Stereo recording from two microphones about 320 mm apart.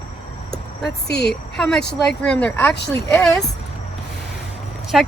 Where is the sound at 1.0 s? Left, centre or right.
Left.